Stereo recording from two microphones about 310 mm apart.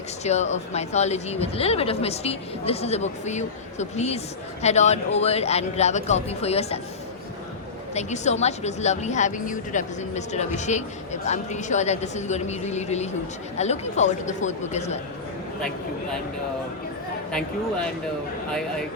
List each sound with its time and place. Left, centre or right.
0.3 s speech: left
7.9 s speech: left